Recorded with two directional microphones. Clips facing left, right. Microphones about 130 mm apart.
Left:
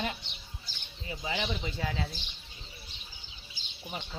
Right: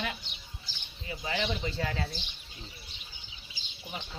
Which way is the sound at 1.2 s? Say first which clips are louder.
Right 2 dB; 10° left (ahead or behind).